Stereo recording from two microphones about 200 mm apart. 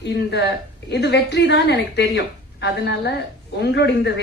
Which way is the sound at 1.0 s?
60° left (ahead or behind).